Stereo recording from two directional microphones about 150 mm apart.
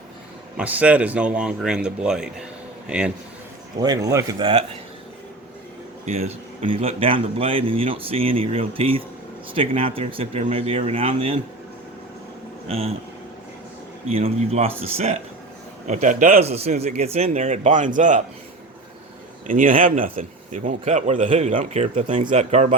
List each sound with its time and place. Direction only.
0.5 s speech: 10° right (ahead or behind)
3.8 s speech: 25° right (ahead or behind)
6.1 s speech: 45° right (ahead or behind)
12.6 s speech: 40° right (ahead or behind)
14.1 s a man's voice: 45° right (ahead or behind)
15.9 s speech: 55° right (ahead or behind)
16.4 s a man's voice: 45° right (ahead or behind)
19.5 s a man's voice: 65° right (ahead or behind); by 22.7 s 50° right (ahead or behind)